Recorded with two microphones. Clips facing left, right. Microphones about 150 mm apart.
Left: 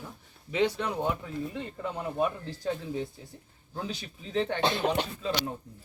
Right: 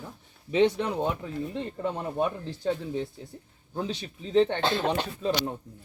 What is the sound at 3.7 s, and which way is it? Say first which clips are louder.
Speech: right 4 dB; 25° right (ahead or behind).